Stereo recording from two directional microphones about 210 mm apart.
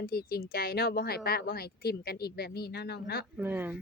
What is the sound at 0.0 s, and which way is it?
Speech, 45° left (ahead or behind).